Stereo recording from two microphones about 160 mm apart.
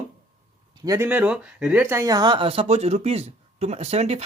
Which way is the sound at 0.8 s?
20° right (ahead or behind).